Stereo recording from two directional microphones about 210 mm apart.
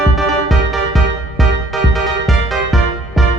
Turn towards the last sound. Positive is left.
turn(degrees=0)  # may be behind; listen again after turning